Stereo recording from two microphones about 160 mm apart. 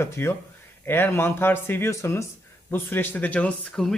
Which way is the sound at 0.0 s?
15° left (ahead or behind).